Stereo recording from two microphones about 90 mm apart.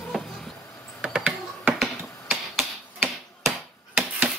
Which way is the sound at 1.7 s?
Centre (ahead or behind).